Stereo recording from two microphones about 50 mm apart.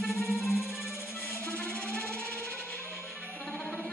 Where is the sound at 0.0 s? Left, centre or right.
Centre.